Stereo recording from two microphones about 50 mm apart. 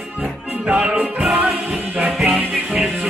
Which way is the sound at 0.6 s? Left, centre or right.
Right.